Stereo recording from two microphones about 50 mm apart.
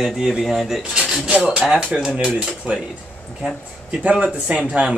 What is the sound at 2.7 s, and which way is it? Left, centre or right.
Speech, right.